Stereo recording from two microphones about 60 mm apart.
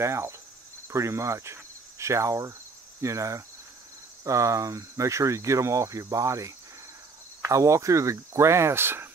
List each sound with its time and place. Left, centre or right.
0.0 s speech: right
0.8 s cricket: right
3.0 s speech: right